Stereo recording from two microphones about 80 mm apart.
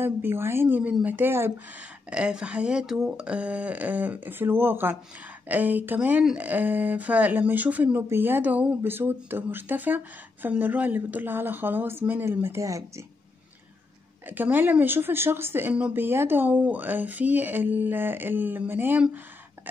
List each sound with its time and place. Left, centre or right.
0.0 s speech: right
2.0 s speech: centre; by 13.0 s right
14.2 s speech: right